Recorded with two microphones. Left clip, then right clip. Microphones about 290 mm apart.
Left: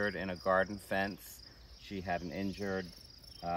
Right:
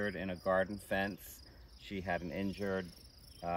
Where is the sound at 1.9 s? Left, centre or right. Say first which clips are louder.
Even; centre.